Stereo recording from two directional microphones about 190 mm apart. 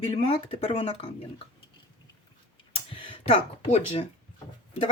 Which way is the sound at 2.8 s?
25° left (ahead or behind).